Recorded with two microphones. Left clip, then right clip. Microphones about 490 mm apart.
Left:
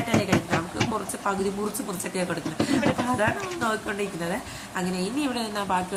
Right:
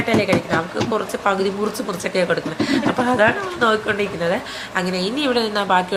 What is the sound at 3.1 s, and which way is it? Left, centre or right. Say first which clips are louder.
A woman's voice: right 9 dB; left.